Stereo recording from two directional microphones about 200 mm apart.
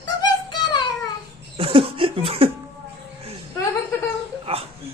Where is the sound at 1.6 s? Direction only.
30° right (ahead or behind).